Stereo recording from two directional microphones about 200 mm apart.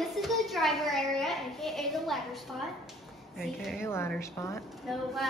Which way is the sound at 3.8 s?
10° left (ahead or behind).